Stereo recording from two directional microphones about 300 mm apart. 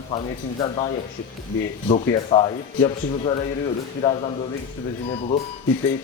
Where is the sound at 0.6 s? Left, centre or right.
Centre.